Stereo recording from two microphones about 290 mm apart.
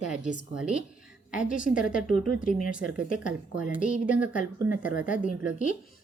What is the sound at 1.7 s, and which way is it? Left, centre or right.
Speech, centre.